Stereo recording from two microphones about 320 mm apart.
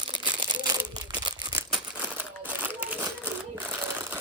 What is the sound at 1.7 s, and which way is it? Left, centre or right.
Crumpling, centre.